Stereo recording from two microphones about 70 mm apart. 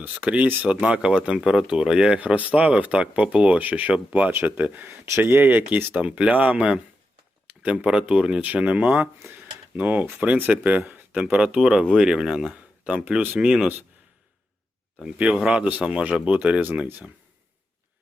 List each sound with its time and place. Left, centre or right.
0.0 s speech: right
15.0 s speech: centre
15.6 s speech: centre